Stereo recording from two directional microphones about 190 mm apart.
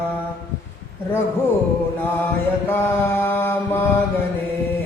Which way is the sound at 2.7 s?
10° left (ahead or behind).